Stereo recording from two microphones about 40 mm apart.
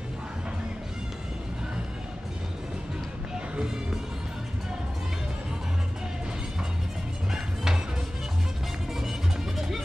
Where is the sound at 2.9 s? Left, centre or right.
Right.